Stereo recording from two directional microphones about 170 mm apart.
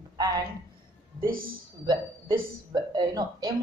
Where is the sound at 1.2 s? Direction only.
55° right (ahead or behind).